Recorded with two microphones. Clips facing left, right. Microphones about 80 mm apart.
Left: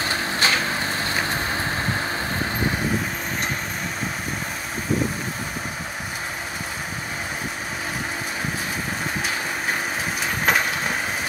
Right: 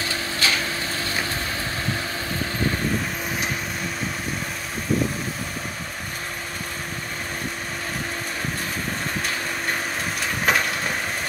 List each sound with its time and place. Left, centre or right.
0.0 s vehicle: left
10.2 s vehicle: centre